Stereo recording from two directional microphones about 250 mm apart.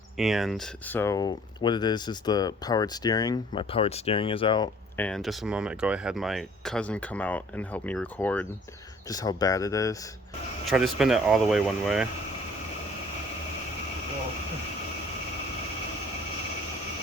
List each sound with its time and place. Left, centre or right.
0.2 s speech: centre
4.9 s speech: centre
10.7 s speech: centre